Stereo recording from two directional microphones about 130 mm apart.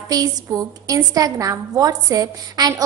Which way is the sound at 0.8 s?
25° right (ahead or behind).